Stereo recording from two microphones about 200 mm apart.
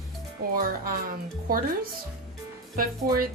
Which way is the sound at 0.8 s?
45° right (ahead or behind).